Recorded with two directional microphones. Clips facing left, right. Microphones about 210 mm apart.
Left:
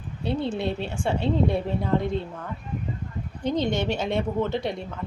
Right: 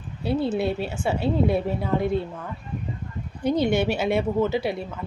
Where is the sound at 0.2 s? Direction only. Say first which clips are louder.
Right 3 dB; 5° right (ahead or behind).